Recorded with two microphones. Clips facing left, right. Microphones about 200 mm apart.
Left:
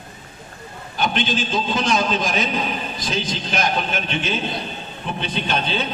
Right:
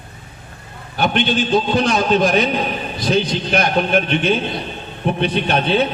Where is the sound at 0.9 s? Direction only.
60° right (ahead or behind).